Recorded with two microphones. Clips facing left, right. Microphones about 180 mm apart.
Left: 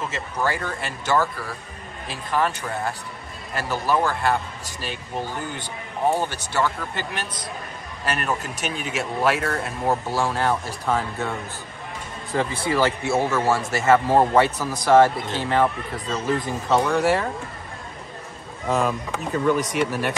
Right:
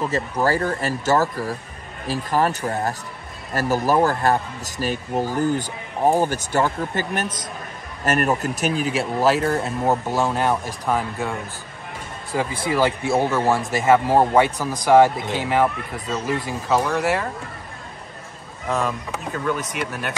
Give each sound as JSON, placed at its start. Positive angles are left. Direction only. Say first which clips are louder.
{"t": 0.0, "sound": "speech", "louder": "right 5 dB", "side_deg": -40}
{"t": 18.7, "sound": "speech", "louder": "left 1 dB", "side_deg": 0}